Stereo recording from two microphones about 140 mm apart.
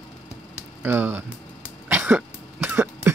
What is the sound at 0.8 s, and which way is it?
Speech, 15° right (ahead or behind).